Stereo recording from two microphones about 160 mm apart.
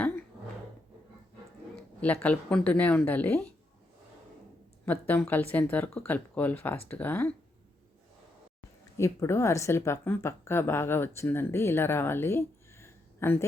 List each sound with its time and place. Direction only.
1.7 s a woman's voice: 5° left (ahead or behind)
4.9 s a woman's voice: 10° left (ahead or behind)
9.0 s a woman's voice: 15° left (ahead or behind)